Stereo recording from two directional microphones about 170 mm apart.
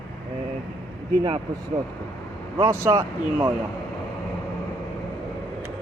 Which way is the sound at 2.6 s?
15° right (ahead or behind).